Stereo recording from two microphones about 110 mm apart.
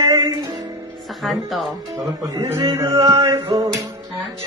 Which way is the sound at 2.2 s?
35° right (ahead or behind).